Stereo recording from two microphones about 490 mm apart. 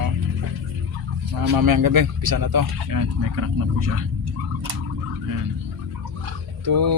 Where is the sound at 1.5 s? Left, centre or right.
Right.